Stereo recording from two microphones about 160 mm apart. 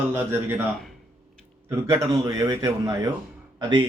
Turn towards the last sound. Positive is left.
turn(degrees=-30)  # may be behind; listen again after turning